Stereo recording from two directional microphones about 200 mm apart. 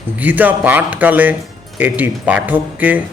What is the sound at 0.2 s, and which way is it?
Speech, 10° right (ahead or behind).